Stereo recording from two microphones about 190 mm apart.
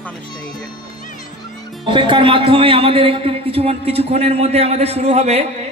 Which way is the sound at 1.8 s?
25° right (ahead or behind).